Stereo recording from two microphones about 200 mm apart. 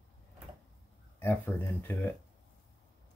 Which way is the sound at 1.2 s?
10° left (ahead or behind).